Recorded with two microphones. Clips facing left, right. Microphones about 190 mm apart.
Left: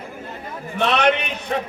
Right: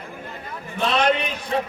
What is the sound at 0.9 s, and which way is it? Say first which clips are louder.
Speech: left 2 dB; 65° left (ahead or behind).